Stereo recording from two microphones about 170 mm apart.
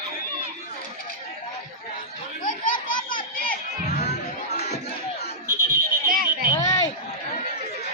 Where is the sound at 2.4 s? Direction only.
50° left (ahead or behind).